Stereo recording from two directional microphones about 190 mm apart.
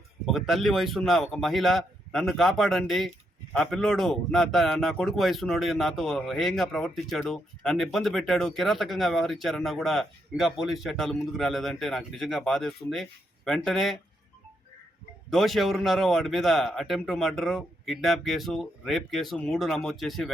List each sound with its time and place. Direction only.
0.3 s a man's voice: centre (ahead or behind)
15.3 s a man's voice: centre (ahead or behind)